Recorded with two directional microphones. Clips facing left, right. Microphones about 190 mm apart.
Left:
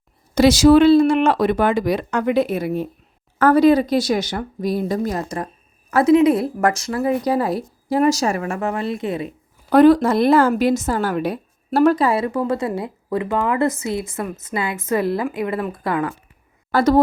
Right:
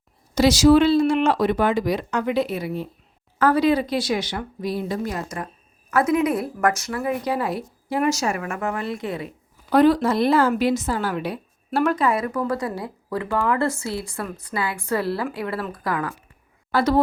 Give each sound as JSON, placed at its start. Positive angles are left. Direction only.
{"t": 0.3, "sound": "speech", "side_deg": 55}
{"t": 9.7, "sound": "a woman's voice", "side_deg": 50}
{"t": 16.7, "sound": "speech", "side_deg": 45}